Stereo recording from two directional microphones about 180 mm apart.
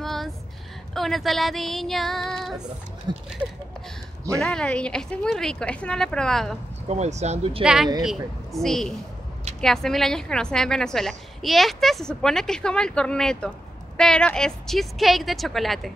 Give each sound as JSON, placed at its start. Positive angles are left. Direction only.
{"t": 0.0, "sound": "a sound", "side_deg": 0}
{"t": 0.9, "sound": "a woman's voice", "side_deg": 0}
{"t": 3.1, "sound": "speech", "side_deg": -25}
{"t": 4.4, "sound": "a woman's voice", "side_deg": 5}
{"t": 6.9, "sound": "speech", "side_deg": -40}
{"t": 7.6, "sound": "a woman's voice", "side_deg": -5}